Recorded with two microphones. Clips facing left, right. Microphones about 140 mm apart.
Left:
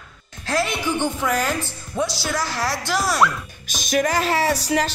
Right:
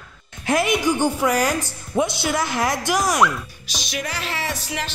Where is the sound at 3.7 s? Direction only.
50° left (ahead or behind).